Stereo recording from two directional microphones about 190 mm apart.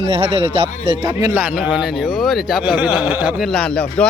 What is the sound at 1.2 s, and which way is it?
Speech, 10° right (ahead or behind).